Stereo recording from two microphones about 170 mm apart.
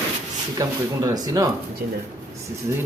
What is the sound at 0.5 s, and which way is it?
Speech, 20° right (ahead or behind).